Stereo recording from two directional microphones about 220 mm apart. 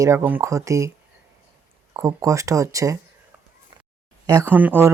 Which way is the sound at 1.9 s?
10° right (ahead or behind).